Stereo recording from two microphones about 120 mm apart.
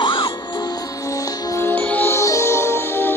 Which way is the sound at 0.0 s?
40° left (ahead or behind).